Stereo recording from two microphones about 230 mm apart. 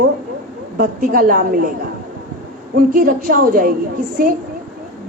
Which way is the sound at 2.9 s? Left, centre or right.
Right.